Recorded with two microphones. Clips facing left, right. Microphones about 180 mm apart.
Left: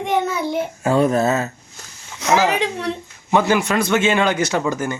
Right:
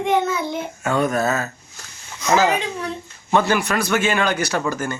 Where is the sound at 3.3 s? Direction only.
20° left (ahead or behind).